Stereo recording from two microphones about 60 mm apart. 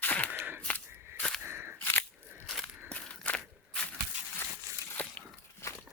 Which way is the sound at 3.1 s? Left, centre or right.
Centre.